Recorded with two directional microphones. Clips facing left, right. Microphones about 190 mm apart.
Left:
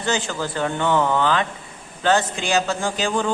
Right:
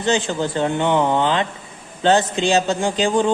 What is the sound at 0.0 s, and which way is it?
A man's voice, 20° right (ahead or behind).